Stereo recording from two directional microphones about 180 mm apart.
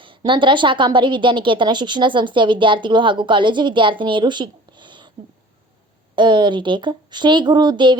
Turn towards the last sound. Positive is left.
turn(degrees=-25)  # may be behind; listen again after turning